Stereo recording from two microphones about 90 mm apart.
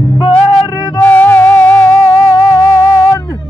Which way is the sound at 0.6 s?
50° left (ahead or behind).